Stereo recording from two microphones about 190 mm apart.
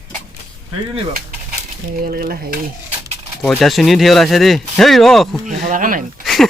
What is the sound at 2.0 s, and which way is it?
Speech, 50° right (ahead or behind).